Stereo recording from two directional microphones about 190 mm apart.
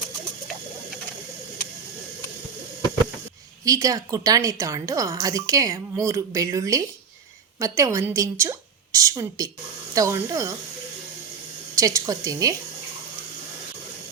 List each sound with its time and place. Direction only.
3.6 s a woman's voice: 20° right (ahead or behind)
11.7 s a woman's voice: 15° right (ahead or behind)